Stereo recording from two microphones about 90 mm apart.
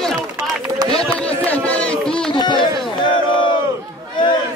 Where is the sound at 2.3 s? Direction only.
60° left (ahead or behind).